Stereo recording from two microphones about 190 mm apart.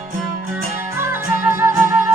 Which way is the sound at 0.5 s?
10° right (ahead or behind).